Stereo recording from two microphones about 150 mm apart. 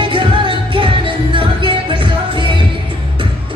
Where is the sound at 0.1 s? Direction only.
35° right (ahead or behind).